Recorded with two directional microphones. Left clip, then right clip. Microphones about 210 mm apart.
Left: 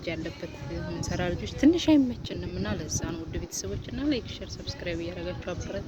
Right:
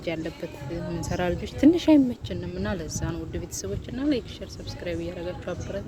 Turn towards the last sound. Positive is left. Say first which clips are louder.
# right 2 dB
turn(degrees=-5)  # may be behind; listen again after turning